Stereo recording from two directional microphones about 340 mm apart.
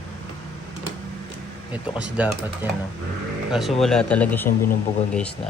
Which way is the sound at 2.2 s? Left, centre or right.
Centre.